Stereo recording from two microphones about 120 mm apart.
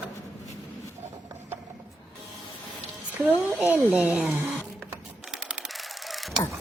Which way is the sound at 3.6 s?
15° right (ahead or behind).